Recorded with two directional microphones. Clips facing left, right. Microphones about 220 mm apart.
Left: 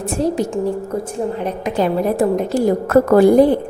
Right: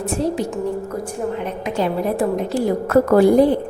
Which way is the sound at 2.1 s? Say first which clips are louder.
Left 3 dB; 45° left (ahead or behind).